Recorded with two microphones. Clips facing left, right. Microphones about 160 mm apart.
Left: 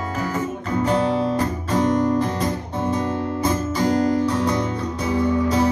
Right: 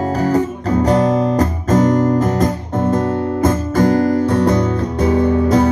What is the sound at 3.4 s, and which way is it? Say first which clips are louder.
Music: right 6 dB; 50° right (ahead or behind).